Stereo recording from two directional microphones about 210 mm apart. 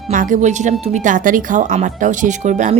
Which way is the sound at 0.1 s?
40° right (ahead or behind).